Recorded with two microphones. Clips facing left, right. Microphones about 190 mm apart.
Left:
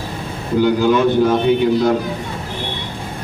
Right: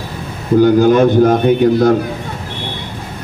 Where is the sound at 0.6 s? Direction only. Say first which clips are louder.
Right 5 dB; 45° right (ahead or behind).